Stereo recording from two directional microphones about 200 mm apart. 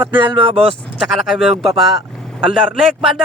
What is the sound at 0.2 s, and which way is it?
Speech, 25° right (ahead or behind).